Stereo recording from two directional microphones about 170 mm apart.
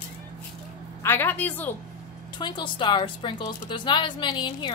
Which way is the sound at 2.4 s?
25° left (ahead or behind).